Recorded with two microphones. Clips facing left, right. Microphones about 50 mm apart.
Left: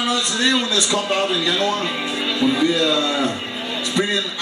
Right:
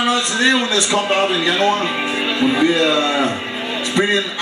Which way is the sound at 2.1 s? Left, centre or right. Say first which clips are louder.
Right 1 dB; right.